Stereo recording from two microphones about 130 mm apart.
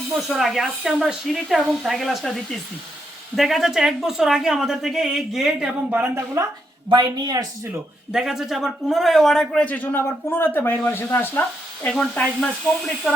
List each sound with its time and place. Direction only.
0.3 s a woman's voice: centre (ahead or behind); by 6.4 s 15° right (ahead or behind)
6.9 s speech: 35° right (ahead or behind)
8.1 s a man's voice: 5° right (ahead or behind)